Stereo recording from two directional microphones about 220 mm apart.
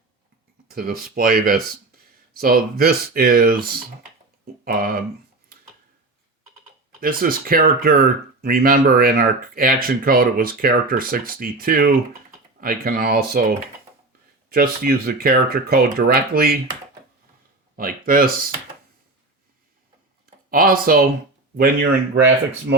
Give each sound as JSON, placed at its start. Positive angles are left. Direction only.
{"t": 0.7, "sound": "speech", "side_deg": -40}
{"t": 7.0, "sound": "speech", "side_deg": -40}
{"t": 14.5, "sound": "speech", "side_deg": -45}
{"t": 17.7, "sound": "speech", "side_deg": -40}
{"t": 20.5, "sound": "speech", "side_deg": -40}